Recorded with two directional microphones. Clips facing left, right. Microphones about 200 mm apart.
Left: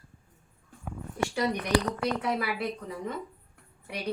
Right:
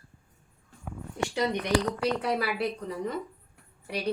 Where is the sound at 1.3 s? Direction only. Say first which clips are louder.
Right 1 dB; 20° right (ahead or behind).